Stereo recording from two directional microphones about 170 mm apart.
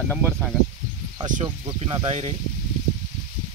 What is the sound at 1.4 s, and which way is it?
Speech, 30° right (ahead or behind).